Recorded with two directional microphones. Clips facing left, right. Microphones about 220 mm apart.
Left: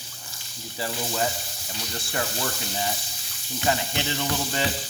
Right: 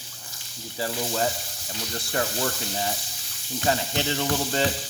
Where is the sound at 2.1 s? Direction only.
40° right (ahead or behind).